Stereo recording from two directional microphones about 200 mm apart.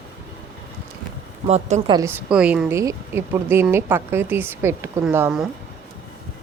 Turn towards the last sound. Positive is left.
turn(degrees=-5)  # may be behind; listen again after turning